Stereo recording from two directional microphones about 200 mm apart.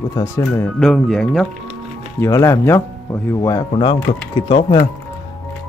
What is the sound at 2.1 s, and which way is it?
Speech, 15° left (ahead or behind).